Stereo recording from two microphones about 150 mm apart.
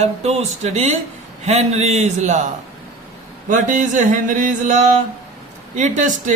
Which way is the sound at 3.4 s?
60° right (ahead or behind).